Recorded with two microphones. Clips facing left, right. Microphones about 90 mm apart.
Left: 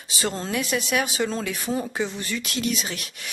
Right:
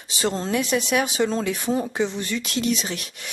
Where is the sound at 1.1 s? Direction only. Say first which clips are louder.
Right 4 dB; centre (ahead or behind).